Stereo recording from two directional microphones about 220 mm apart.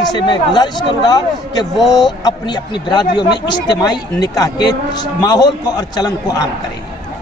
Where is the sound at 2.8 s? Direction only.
20° left (ahead or behind).